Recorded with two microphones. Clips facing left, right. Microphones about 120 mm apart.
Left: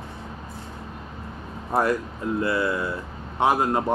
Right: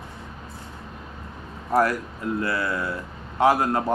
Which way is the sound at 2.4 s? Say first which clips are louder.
Left 4 dB; 25° left (ahead or behind).